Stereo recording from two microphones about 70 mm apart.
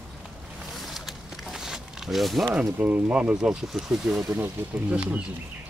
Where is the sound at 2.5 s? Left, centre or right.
Centre.